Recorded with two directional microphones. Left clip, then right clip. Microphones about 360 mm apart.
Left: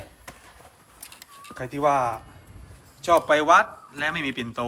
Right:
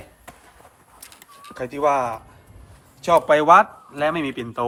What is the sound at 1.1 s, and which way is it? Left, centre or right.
Bird, centre.